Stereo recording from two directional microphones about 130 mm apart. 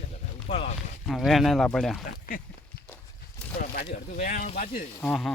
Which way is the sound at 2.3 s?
90° left.